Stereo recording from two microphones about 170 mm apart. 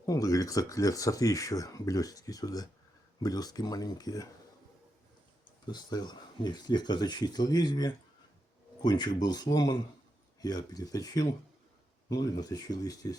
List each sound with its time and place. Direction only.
0.0 s speech: 20° left (ahead or behind)
5.6 s speech: 25° left (ahead or behind)